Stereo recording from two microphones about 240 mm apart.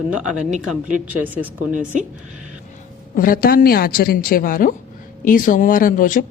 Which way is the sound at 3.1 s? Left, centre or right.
Left.